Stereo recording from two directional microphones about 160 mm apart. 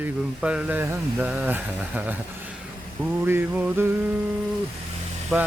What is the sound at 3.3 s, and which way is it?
Speech, 10° right (ahead or behind).